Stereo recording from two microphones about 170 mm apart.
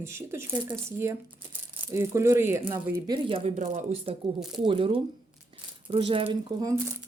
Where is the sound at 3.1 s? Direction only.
35° right (ahead or behind).